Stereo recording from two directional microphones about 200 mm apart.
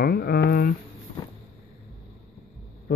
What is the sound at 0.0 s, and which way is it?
Speech, 50° left (ahead or behind).